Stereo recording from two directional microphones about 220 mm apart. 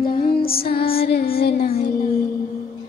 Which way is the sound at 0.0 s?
40° left (ahead or behind).